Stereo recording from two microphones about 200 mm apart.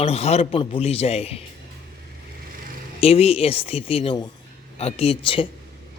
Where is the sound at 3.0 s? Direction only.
30° left (ahead or behind).